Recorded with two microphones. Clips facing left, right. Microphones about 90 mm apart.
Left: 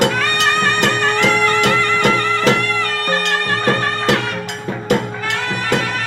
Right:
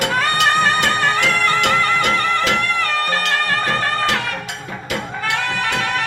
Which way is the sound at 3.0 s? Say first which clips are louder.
Left 1 dB; 40° left (ahead or behind).